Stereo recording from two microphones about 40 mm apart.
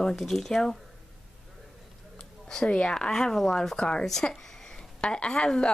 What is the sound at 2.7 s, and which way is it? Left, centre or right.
Speech, left.